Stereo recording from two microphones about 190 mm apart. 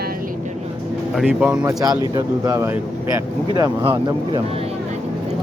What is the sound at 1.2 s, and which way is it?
Speech, 5° right (ahead or behind).